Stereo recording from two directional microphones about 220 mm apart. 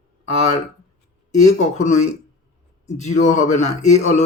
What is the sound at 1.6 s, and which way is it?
Speech, 30° left (ahead or behind).